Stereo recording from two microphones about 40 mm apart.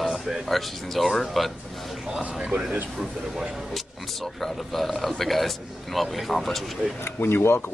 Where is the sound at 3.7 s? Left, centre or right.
Centre.